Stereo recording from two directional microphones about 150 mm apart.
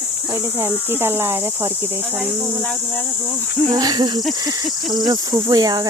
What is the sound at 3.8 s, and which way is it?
Speech, 25° right (ahead or behind).